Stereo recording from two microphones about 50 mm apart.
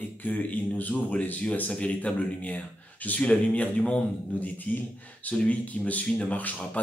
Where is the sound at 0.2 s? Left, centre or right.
Left.